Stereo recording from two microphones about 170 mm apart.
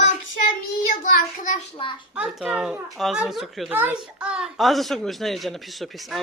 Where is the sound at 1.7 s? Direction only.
30° left (ahead or behind).